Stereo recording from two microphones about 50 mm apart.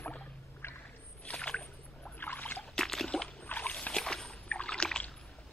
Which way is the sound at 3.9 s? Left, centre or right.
Centre.